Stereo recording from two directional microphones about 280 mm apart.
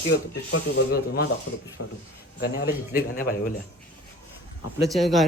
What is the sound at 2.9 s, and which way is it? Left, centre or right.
Speech, left.